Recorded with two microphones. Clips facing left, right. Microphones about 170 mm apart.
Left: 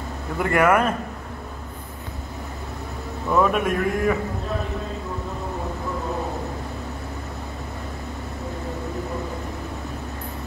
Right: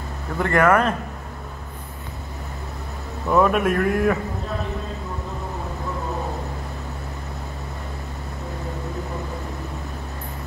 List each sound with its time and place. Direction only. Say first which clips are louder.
0.4 s a man's voice: right 1 dB; 10° left (ahead or behind)
3.3 s a man's voice: right 2 dB; centre (ahead or behind)